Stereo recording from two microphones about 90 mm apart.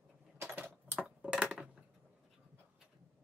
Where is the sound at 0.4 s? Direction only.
25° right (ahead or behind).